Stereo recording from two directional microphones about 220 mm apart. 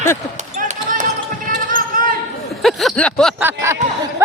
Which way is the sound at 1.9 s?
40° right (ahead or behind).